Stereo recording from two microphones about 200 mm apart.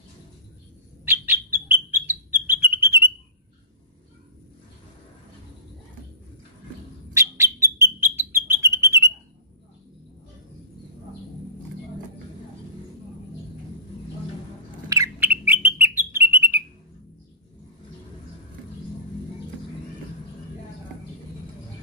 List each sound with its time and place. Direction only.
1.0 s bird: 10° right (ahead or behind)
7.2 s bird: 15° right (ahead or behind)
14.9 s bird: 15° right (ahead or behind)